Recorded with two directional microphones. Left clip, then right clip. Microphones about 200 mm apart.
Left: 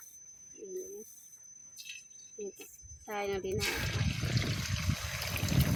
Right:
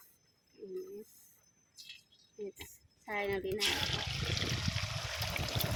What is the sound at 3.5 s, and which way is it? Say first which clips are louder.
Speech: right 1 dB; 35° left (ahead or behind).